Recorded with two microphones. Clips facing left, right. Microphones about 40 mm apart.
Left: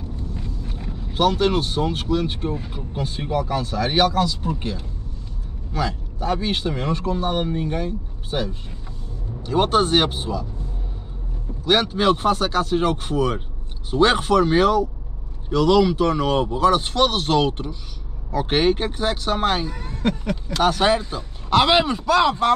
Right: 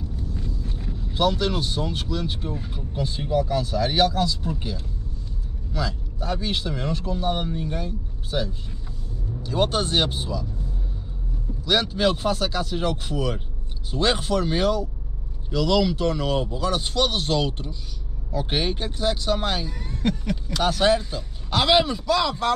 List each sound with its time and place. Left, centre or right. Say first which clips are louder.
0.4 s vehicle: left 1 dB; left
1.1 s a man's voice: left 4 dB; left
2.5 s speech: left 3 dB; centre
3.0 s a man's voice: even; left
5.7 s a man's voice: left 4 dB; left
11.6 s a man's voice: left 3 dB; left
18.3 s speech: left 7 dB; left; by 20.5 s centre
20.5 s speech: left 2 dB; left